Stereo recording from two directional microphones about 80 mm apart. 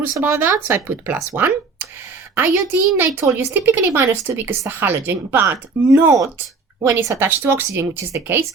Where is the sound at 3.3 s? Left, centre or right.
Right.